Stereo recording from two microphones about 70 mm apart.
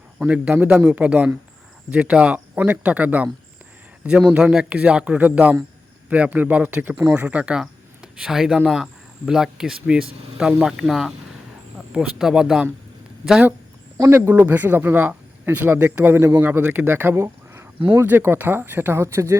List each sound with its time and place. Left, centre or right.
0.2 s speech: right
4.3 s speech: right
14.0 s speech: right
14.4 s speech: right
16.4 s speech: right
17.2 s a sound: right
18.2 s speech: right
19.0 s speech: right